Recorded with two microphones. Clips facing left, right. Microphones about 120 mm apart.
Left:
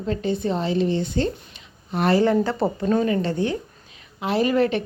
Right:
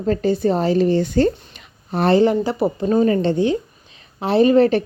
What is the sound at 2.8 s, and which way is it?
A woman's voice, 35° right (ahead or behind).